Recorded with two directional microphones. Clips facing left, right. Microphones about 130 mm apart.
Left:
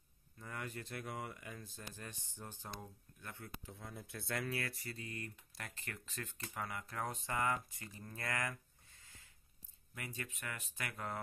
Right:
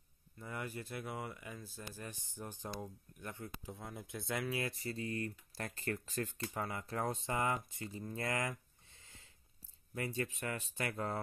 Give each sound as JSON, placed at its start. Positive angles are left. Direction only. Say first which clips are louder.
{"t": 0.4, "sound": "speech", "louder": "right 3 dB", "side_deg": -5}